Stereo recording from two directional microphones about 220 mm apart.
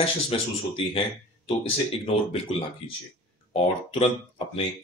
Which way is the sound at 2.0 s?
25° left (ahead or behind).